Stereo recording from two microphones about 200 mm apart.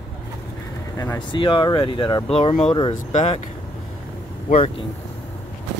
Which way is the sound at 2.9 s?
35° left (ahead or behind).